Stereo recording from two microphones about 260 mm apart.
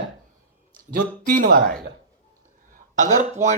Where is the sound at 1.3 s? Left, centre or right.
Right.